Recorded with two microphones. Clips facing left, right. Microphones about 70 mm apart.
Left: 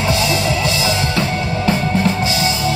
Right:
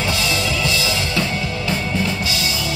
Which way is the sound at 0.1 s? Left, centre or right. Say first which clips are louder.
Left 4 dB; left.